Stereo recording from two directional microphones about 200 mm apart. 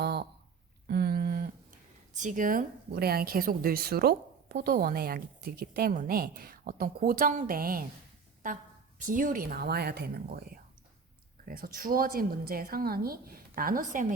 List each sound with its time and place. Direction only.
0.0 s a sound: 55° right (ahead or behind)
2.1 s a woman's voice: 40° right (ahead or behind)
9.0 s a woman's voice: 40° right (ahead or behind)
11.4 s a woman's voice: 45° right (ahead or behind)